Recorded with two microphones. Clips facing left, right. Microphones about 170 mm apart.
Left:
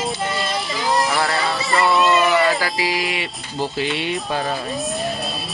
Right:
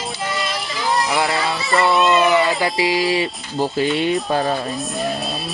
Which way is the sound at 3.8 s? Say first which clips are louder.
Right 5 dB; 40° right (ahead or behind).